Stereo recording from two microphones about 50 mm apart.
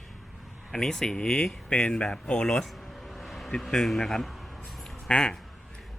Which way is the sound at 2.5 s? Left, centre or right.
Centre.